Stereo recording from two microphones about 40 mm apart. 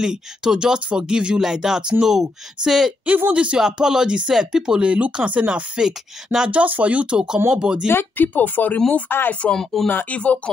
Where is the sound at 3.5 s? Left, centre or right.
Centre.